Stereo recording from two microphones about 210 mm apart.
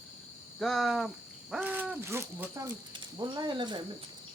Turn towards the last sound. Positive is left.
turn(degrees=-20)  # may be behind; listen again after turning